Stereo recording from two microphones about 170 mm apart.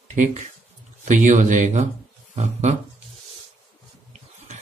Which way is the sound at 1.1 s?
45° right (ahead or behind).